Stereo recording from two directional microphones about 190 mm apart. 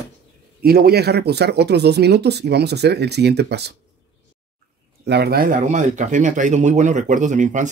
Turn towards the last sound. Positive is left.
turn(degrees=-40)  # may be behind; listen again after turning